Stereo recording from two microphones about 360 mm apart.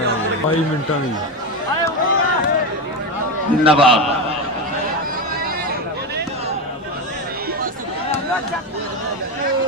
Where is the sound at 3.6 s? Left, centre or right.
Centre.